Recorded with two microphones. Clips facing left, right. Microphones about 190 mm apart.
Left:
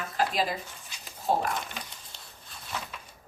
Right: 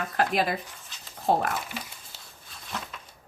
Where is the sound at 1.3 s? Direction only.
60° right (ahead or behind).